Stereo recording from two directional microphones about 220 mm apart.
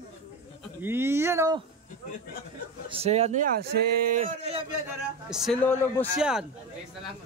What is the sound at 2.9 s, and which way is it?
Speech, 30° right (ahead or behind).